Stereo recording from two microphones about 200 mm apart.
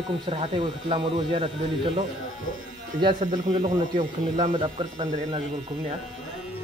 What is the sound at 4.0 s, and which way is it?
Speech, 40° right (ahead or behind).